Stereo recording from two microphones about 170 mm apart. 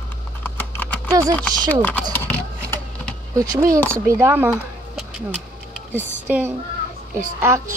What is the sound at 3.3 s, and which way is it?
Speech, 20° right (ahead or behind).